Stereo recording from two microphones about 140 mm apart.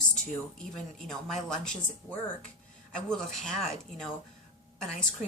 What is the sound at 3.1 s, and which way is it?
A woman's voice, 5° left (ahead or behind).